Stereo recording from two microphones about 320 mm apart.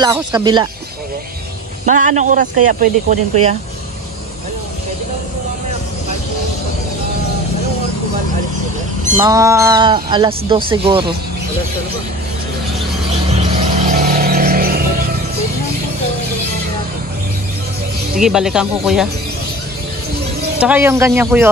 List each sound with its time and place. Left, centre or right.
0.0 s speech: centre
1.9 s speech: right
9.2 s speech: centre
13.4 s music: centre
18.2 s speech: centre
20.5 s speech: centre